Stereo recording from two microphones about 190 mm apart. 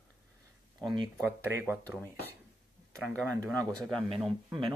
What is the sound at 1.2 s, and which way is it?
Speech, 15° right (ahead or behind).